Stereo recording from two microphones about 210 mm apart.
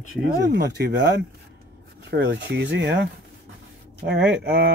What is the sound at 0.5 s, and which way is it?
Speech, 50° right (ahead or behind).